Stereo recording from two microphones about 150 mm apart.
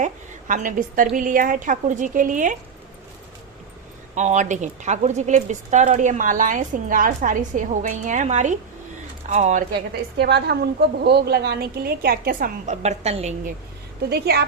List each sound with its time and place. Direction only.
0.0 s a woman's voice: 60° right (ahead or behind)
4.1 s a woman's voice: 50° right (ahead or behind)
10.3 s a woman's voice: 90° right; by 12.7 s 70° right (ahead or behind)
12.7 s a woman's voice: 50° right (ahead or behind)
14.0 s a woman's voice: 90° right